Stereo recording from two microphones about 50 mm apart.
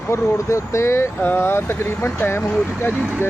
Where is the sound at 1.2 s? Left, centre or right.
Left.